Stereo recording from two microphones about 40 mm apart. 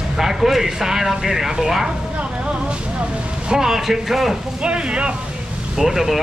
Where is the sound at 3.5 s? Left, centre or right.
Centre.